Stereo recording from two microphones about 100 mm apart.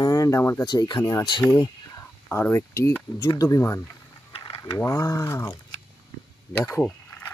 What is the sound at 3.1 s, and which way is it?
Speech, 35° left (ahead or behind).